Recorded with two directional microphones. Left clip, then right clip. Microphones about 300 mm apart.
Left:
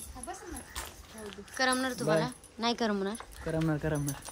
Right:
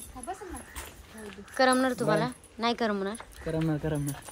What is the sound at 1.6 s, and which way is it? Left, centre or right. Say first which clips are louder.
A woman's voice: right 6 dB; centre.